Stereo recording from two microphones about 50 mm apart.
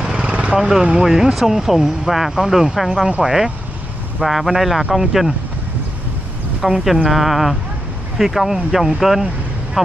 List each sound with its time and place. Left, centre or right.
0.0 s vehicle: centre
0.6 s speech: centre
4.2 s speech: centre
6.6 s speech: centre